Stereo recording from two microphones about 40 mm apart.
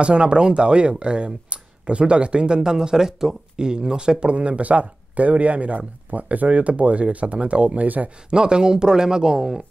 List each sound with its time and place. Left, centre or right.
0.0 s speech: right
8.3 s speech: right